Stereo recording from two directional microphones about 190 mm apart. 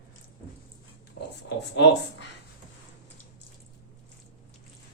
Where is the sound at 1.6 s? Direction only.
65° left (ahead or behind).